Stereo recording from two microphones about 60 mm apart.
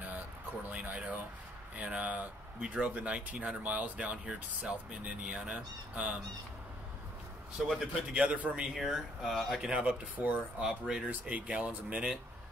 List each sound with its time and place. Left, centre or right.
0.7 s speech: right
7.5 s speech: centre
8.1 s speech: right
8.7 s speech: centre
9.7 s speech: right